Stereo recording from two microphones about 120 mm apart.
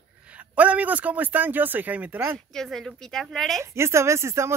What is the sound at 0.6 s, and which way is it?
Speech, 10° right (ahead or behind).